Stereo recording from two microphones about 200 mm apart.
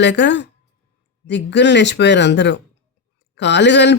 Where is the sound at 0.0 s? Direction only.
60° left (ahead or behind).